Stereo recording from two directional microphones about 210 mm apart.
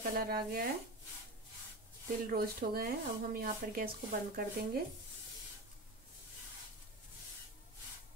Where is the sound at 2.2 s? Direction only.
45° right (ahead or behind).